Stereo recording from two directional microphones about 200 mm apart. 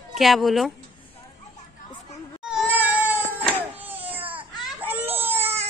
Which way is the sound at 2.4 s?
5° right (ahead or behind).